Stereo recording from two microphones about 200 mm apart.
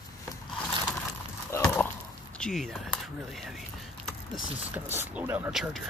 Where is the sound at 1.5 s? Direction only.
10° left (ahead or behind).